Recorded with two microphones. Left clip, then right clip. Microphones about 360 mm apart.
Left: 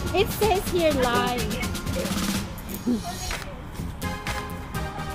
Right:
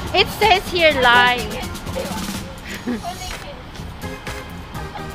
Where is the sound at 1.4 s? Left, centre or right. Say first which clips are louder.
Right 3 dB; centre.